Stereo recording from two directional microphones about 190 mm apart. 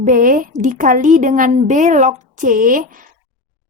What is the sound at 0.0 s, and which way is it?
A woman's voice, 45° right (ahead or behind).